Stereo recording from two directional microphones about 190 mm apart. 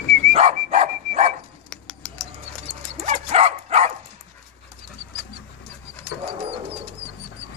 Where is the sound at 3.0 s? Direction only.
35° right (ahead or behind).